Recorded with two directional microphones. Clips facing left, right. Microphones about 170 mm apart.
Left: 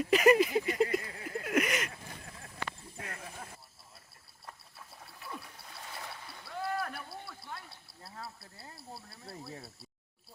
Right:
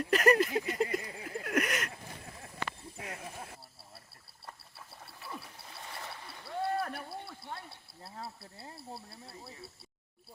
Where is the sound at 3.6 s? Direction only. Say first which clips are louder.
Right 4 dB; 30° right (ahead or behind).